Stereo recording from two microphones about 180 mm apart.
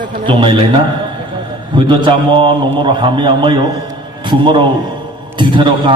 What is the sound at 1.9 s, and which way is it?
A man's voice, 25° right (ahead or behind).